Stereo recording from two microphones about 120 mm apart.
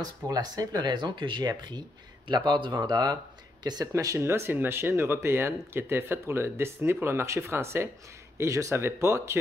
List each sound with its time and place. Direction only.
0.0 s speech: 30° right (ahead or behind)